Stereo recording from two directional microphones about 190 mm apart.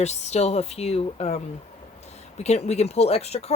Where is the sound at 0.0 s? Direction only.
35° left (ahead or behind).